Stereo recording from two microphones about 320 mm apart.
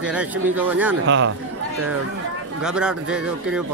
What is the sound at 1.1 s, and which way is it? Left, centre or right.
Speech, right.